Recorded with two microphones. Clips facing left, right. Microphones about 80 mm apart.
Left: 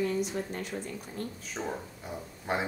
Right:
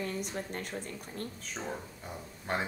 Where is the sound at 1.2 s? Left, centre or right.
Right.